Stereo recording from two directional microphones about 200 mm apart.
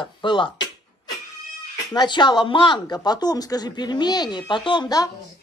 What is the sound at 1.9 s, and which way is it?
Speech, 20° left (ahead or behind).